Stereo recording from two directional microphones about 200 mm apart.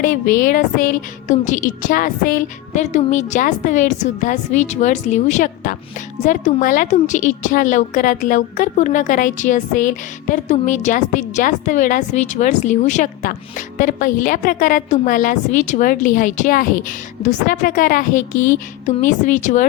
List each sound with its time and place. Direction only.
0.0 s a woman's voice: 40° left (ahead or behind)